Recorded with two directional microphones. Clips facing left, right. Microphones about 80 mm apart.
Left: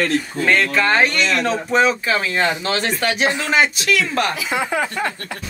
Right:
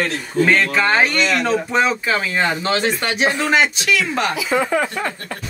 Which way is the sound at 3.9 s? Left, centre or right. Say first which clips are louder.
Even; centre.